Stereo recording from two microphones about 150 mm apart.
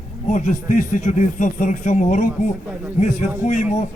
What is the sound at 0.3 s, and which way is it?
A man's voice, 55° left (ahead or behind).